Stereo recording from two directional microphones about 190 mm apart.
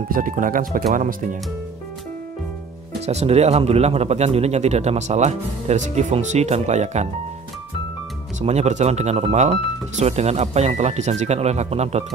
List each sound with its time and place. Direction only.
0.1 s speech: 45° right (ahead or behind)
3.1 s speech: 35° right (ahead or behind)
8.4 s speech: 35° right (ahead or behind)